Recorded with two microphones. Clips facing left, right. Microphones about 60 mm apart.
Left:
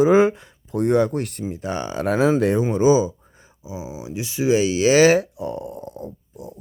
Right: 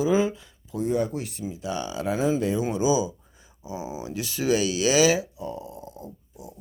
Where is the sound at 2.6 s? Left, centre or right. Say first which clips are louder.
Left 6 dB; left.